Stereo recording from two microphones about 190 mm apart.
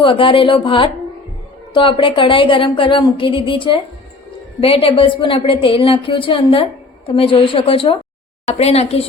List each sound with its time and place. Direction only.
0.0 s a woman's voice: 25° left (ahead or behind)